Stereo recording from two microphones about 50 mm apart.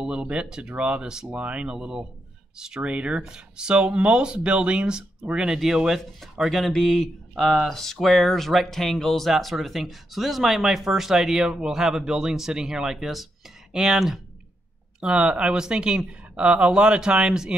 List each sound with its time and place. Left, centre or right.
0.0 s speech: centre
1.3 s speech: right; by 6.6 s centre
6.6 s speech: centre
15.0 s speech: centre